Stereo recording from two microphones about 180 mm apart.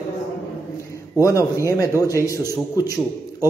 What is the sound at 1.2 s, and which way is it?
Speech, 20° left (ahead or behind).